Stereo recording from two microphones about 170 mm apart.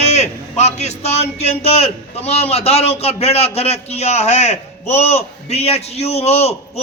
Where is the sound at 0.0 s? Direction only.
40° left (ahead or behind).